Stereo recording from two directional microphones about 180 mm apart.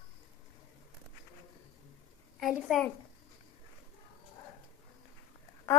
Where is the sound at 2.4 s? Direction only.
Centre (ahead or behind).